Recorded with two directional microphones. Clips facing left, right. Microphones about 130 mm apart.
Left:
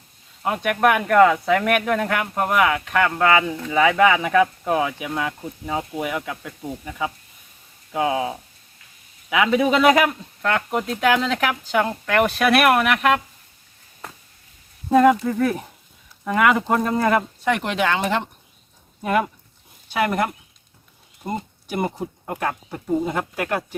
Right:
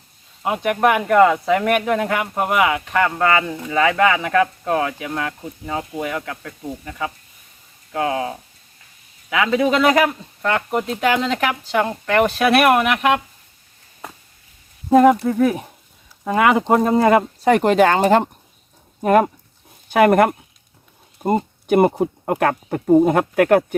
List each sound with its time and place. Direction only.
0.4 s speech: 5° right (ahead or behind)
14.8 s speech: 10° right (ahead or behind)
17.4 s speech: 40° right (ahead or behind)
19.9 s speech: 55° right (ahead or behind)
21.7 s speech: 55° right (ahead or behind)